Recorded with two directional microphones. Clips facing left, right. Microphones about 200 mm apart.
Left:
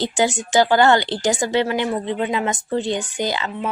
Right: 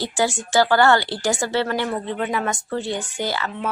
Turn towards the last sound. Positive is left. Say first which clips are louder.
# left 2 dB
turn(degrees=20)  # may be behind; listen again after turning